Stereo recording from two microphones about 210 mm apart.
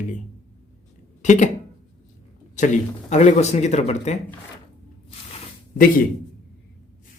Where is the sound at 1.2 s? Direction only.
35° left (ahead or behind).